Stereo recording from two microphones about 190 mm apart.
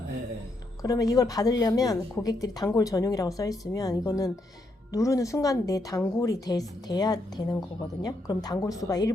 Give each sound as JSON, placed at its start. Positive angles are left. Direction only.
{"t": 0.8, "sound": "a woman's voice", "side_deg": 20}